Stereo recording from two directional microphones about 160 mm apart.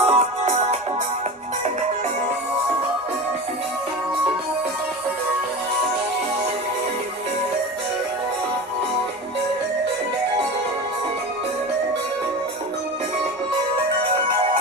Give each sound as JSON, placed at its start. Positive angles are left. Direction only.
{"t": 0.0, "sound": "music", "side_deg": -40}